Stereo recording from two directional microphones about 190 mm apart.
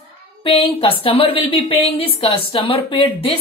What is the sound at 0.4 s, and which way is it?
Speech, 30° left (ahead or behind).